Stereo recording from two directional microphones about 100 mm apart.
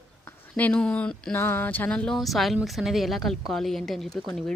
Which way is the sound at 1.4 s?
20° left (ahead or behind).